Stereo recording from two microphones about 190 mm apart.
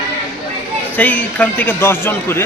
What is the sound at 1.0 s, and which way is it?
A man's voice, 10° left (ahead or behind).